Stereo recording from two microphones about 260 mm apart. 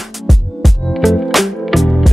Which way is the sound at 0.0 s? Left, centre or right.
Centre.